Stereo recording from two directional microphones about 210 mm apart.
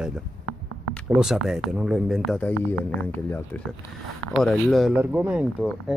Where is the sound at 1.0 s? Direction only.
5° right (ahead or behind).